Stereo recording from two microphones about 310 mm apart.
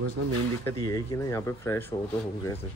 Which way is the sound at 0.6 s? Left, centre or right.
Centre.